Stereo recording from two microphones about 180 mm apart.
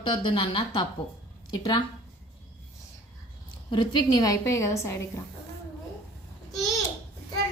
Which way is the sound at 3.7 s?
25° left (ahead or behind).